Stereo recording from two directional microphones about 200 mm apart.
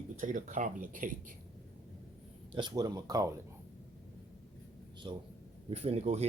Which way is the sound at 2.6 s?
20° right (ahead or behind).